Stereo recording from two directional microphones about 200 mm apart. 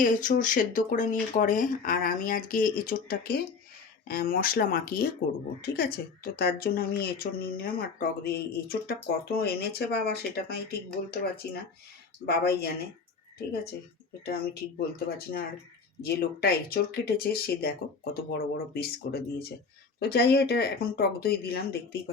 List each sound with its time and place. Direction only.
0.0 s a woman's voice: 40° left (ahead or behind)
12.2 s a woman's voice: 50° left (ahead or behind)
14.3 s a woman's voice: 50° left (ahead or behind)